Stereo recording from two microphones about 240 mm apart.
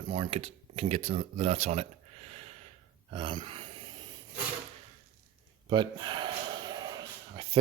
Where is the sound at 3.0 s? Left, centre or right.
Right.